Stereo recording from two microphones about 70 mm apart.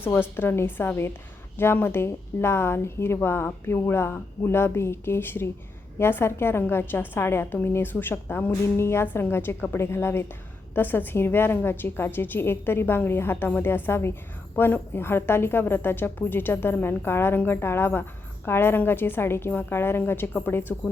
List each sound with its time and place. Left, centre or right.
0.0 s a woman's voice: left